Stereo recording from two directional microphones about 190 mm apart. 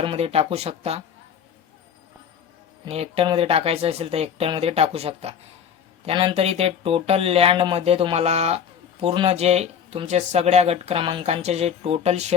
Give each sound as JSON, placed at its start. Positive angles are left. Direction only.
{"t": 0.0, "sound": "speech", "side_deg": -30}
{"t": 2.8, "sound": "speech", "side_deg": -30}